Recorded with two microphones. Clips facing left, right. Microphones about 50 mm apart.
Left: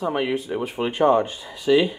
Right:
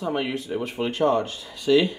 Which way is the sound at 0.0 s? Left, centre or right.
Centre.